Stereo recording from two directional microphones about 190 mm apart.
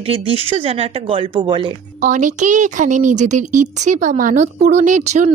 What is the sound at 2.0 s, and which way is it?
Speech, 40° right (ahead or behind).